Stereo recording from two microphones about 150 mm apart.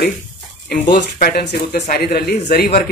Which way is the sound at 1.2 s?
90° left.